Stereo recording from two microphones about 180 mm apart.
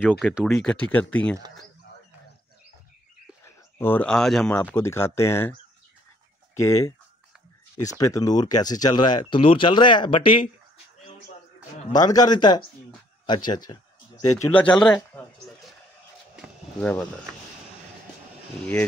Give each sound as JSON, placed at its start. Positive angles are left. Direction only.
{"t": 0.0, "sound": "speech", "side_deg": -5}
{"t": 3.4, "sound": "speech", "side_deg": 15}
{"t": 11.9, "sound": "speech", "side_deg": 20}
{"t": 14.3, "sound": "speech", "side_deg": 15}
{"t": 16.4, "sound": "a sound", "side_deg": -5}
{"t": 16.8, "sound": "speech", "side_deg": 10}